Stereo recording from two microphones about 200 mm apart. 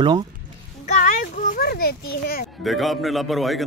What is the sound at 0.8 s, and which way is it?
A child's voice, 40° left (ahead or behind).